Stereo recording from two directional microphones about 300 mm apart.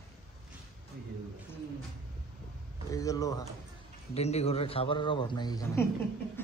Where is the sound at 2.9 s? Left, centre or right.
Centre.